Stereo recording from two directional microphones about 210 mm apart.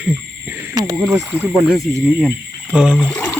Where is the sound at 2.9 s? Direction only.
5° left (ahead or behind).